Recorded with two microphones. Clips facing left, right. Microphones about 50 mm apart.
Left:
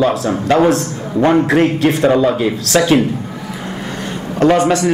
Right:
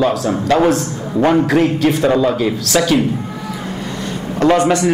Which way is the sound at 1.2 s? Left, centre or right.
Centre.